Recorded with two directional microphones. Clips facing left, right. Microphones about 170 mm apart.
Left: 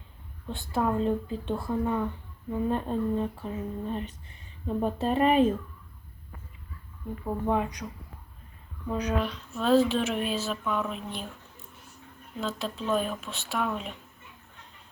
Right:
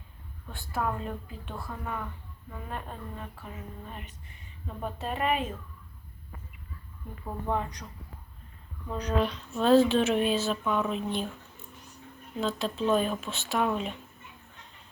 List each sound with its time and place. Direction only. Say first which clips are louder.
0.4 s speech: left 4 dB; 25° left (ahead or behind)
7.4 s speech: left 3 dB; 15° left (ahead or behind)
8.9 s speech: left 4 dB; 15° left (ahead or behind)
9.2 s speech: right 2 dB; centre (ahead or behind)
12.4 s speech: right 3 dB; centre (ahead or behind)